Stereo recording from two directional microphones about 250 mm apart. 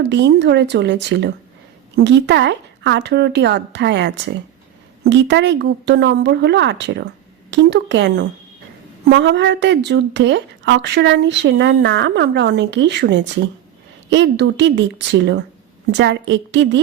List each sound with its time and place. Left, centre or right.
0.0 s speech: right